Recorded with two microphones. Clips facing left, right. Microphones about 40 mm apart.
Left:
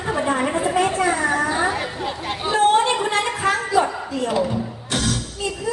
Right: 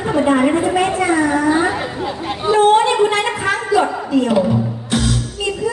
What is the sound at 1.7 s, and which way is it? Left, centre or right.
Chatter, right.